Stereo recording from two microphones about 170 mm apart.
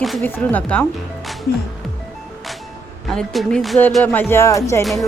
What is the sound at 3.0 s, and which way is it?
Speech, centre (ahead or behind).